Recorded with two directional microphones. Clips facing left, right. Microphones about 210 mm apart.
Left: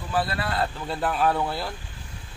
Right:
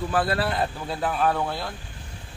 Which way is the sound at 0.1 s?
50° right (ahead or behind).